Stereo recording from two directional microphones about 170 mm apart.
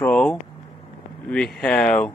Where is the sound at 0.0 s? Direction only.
5° left (ahead or behind).